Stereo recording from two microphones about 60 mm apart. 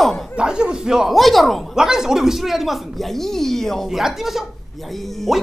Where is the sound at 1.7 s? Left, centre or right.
Centre.